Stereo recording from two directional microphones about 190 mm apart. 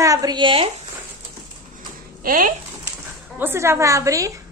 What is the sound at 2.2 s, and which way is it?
Speech, 45° right (ahead or behind).